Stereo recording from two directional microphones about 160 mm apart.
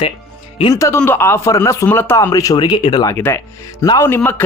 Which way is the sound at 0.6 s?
20° left (ahead or behind).